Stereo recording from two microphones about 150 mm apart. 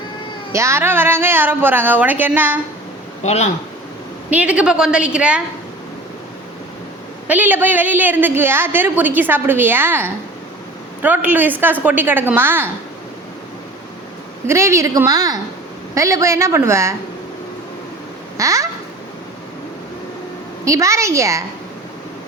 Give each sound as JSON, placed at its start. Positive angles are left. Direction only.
{"t": 0.5, "sound": "a woman's voice", "side_deg": -20}
{"t": 3.2, "sound": "speech", "side_deg": 45}
{"t": 4.3, "sound": "a woman's voice", "side_deg": -10}
{"t": 7.3, "sound": "a woman's voice", "side_deg": -10}
{"t": 14.4, "sound": "a woman's voice", "side_deg": -20}
{"t": 18.3, "sound": "a woman's voice", "side_deg": -20}
{"t": 20.7, "sound": "a woman's voice", "side_deg": -20}